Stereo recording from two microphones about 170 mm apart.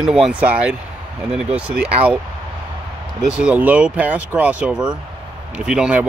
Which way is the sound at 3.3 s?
5° right (ahead or behind).